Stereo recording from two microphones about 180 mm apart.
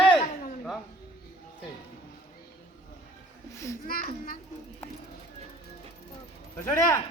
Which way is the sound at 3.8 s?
55° left (ahead or behind).